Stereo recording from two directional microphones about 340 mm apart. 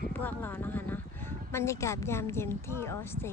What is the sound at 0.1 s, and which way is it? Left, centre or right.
Speech, centre.